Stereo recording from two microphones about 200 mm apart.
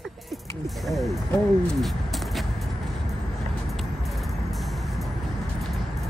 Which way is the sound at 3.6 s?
Centre (ahead or behind).